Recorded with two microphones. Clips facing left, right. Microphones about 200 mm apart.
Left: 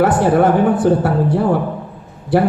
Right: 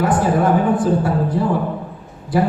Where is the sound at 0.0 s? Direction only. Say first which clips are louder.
Left 4 dB; 70° left (ahead or behind).